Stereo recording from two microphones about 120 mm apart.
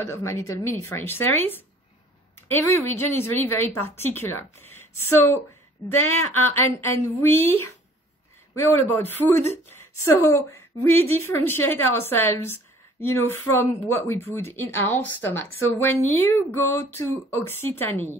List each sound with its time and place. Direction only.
0.0 s speech: 25° left (ahead or behind)